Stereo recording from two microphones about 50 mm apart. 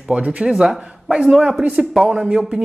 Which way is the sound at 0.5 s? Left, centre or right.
Centre.